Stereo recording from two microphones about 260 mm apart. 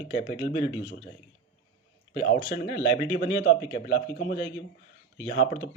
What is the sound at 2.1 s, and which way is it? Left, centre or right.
A man's voice, left.